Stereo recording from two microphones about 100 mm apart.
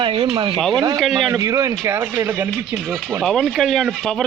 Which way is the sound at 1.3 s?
30° right (ahead or behind).